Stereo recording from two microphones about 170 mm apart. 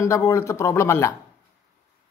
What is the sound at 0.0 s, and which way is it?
Speech, 15° left (ahead or behind).